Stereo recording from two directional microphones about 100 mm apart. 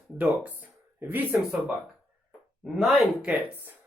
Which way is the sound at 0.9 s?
15° right (ahead or behind).